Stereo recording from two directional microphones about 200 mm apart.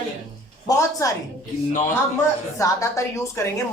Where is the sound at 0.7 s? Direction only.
15° left (ahead or behind).